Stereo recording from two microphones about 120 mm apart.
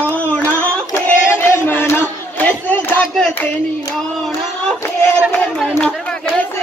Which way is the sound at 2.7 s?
5° left (ahead or behind).